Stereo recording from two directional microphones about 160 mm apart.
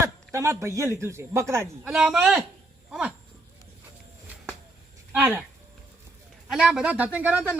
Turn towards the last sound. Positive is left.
turn(degrees=-10)  # may be behind; listen again after turning